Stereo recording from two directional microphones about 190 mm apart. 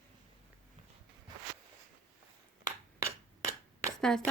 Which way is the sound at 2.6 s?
15° right (ahead or behind).